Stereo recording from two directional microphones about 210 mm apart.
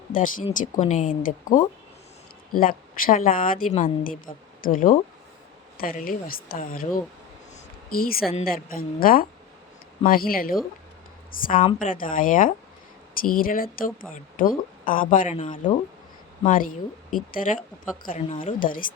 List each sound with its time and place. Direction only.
0.1 s a woman's voice: 40° left (ahead or behind)
7.5 s a sound: 45° left (ahead or behind)
8.4 s a woman's voice: 45° left (ahead or behind)